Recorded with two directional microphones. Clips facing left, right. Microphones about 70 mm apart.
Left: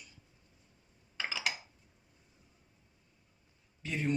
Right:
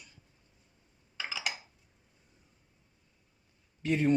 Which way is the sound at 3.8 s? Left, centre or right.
Right.